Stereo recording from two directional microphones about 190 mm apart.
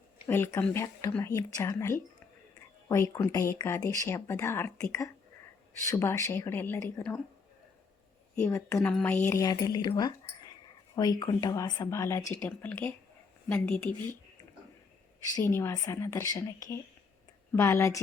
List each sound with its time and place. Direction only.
0.3 s speech: 10° left (ahead or behind)
8.4 s speech: 15° left (ahead or behind)
15.4 s speech: 15° left (ahead or behind)